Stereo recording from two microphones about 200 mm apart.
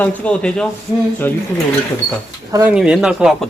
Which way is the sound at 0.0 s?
5° left (ahead or behind).